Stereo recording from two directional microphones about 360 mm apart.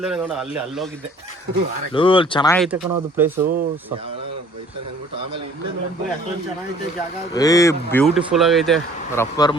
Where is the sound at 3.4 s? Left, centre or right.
Right.